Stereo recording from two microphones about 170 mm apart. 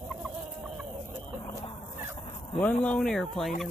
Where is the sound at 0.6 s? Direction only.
Centre (ahead or behind).